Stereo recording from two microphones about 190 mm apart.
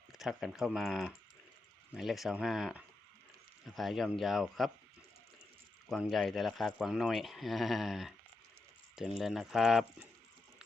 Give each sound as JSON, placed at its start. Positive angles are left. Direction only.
{"t": 0.1, "sound": "speech", "side_deg": 0}
{"t": 5.9, "sound": "speech", "side_deg": 0}